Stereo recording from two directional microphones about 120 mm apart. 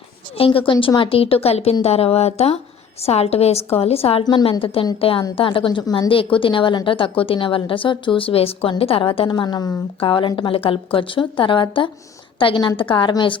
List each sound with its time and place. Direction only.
0.3 s a woman's voice: 50° left (ahead or behind)
4.2 s a woman's voice: 35° left (ahead or behind)
4.6 s speech: 50° left (ahead or behind); by 9.7 s 35° left (ahead or behind)
10.0 s speech: 45° left (ahead or behind)